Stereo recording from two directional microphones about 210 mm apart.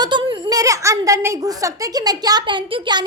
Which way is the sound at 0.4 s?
15° right (ahead or behind).